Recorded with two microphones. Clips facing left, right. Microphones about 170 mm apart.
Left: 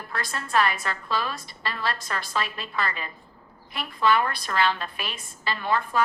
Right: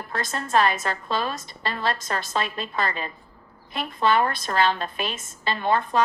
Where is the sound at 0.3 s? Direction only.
30° right (ahead or behind).